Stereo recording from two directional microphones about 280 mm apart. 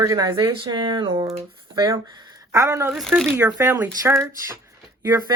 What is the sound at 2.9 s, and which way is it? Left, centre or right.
Speech, centre.